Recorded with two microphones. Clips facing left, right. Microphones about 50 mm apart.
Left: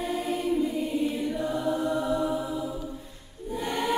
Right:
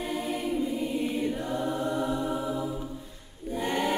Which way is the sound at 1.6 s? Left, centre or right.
Right.